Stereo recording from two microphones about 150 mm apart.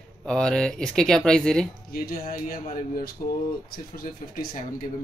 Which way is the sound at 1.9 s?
75° left (ahead or behind).